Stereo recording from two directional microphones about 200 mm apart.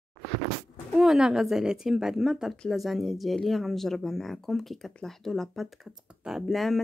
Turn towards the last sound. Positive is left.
turn(degrees=0)  # may be behind; listen again after turning